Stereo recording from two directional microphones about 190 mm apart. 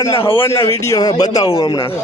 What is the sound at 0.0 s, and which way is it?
A child's voice, 15° left (ahead or behind).